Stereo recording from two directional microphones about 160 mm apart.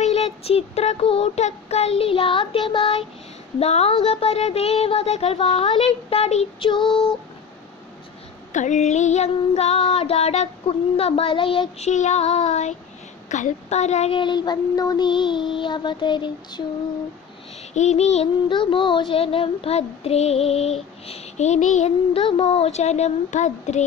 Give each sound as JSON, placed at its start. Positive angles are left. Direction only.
{"t": 0.0, "sound": "child singing", "side_deg": 40}
{"t": 6.8, "sound": "female singing", "side_deg": 0}
{"t": 8.5, "sound": "child singing", "side_deg": 50}
{"t": 11.9, "sound": "child singing", "side_deg": 45}
{"t": 14.1, "sound": "child singing", "side_deg": 30}
{"t": 17.7, "sound": "child singing", "side_deg": 45}
{"t": 18.5, "sound": "child singing", "side_deg": 30}